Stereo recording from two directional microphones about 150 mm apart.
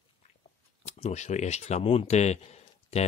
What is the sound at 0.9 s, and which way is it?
Speech, 50° left (ahead or behind).